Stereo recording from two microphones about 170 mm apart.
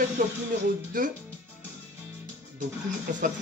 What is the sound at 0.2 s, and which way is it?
Speech, 55° right (ahead or behind).